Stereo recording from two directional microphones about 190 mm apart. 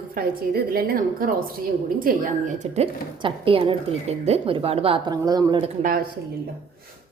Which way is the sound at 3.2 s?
30° right (ahead or behind).